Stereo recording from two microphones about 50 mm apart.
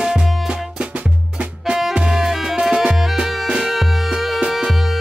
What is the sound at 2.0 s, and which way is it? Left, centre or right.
Music, centre.